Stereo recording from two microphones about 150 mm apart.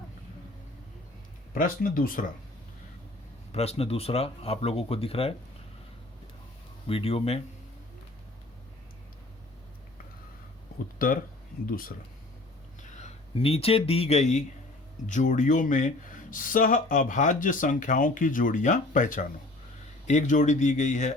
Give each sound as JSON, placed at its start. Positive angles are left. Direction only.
{"t": 1.5, "sound": "speech", "side_deg": 70}
{"t": 3.5, "sound": "speech", "side_deg": 45}
{"t": 6.8, "sound": "speech", "side_deg": 40}
{"t": 10.9, "sound": "speech", "side_deg": 70}
{"t": 13.0, "sound": "speech", "side_deg": 45}